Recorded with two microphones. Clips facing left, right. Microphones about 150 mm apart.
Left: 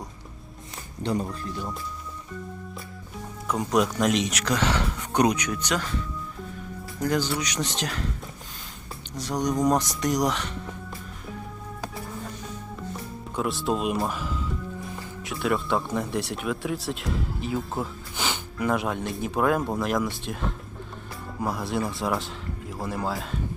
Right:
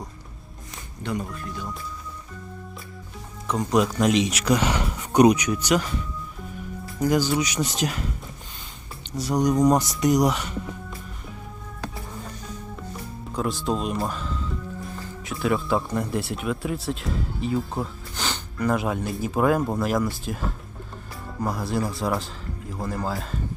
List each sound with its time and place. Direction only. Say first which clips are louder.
1.0 s speech: left 2 dB; 30° left (ahead or behind)
3.4 s speech: right 2 dB; 5° left (ahead or behind)
7.0 s speech: right 4 dB; 10° right (ahead or behind)
9.1 s speech: right 5 dB; 10° right (ahead or behind)
13.3 s speech: right 1 dB; centre (ahead or behind)